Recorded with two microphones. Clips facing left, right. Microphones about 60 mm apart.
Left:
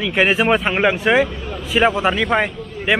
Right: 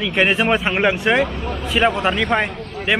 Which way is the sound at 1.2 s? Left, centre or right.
Right.